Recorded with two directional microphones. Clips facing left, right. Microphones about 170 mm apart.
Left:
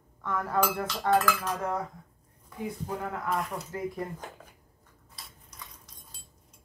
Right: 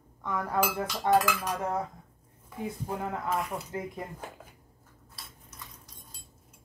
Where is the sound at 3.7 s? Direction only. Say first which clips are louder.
Left 2 dB; 20° right (ahead or behind).